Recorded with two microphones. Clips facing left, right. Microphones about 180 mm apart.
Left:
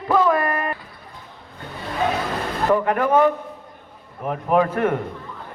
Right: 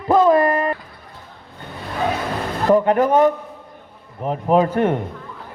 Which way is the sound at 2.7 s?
25° right (ahead or behind).